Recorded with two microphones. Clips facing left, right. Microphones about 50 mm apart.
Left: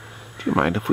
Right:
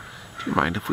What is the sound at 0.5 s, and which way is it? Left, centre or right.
Speech, left.